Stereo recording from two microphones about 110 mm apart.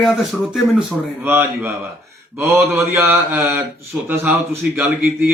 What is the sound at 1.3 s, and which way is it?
Speech, 20° right (ahead or behind).